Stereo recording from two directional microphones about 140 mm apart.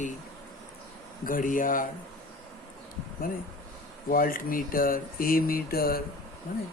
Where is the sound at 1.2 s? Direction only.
80° left.